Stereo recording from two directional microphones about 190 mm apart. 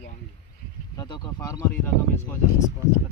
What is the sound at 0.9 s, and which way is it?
Speech, 20° left (ahead or behind).